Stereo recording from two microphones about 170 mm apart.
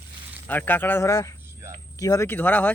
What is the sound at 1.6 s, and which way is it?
Cricket, 15° right (ahead or behind).